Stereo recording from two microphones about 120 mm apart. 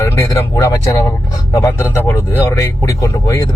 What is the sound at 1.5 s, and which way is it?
Speech, 20° left (ahead or behind).